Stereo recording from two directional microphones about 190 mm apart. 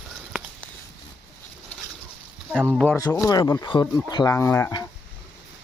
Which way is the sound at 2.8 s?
15° left (ahead or behind).